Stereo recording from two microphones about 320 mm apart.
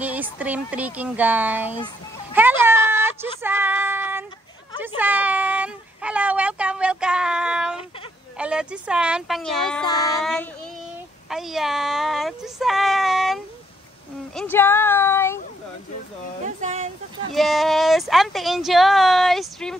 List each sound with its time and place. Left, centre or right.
0.0 s speech: centre
2.3 s a sound: centre
3.4 s child singing: centre
4.8 s speech: centre
11.2 s speech: centre
16.6 s a sound: right
17.3 s speech: centre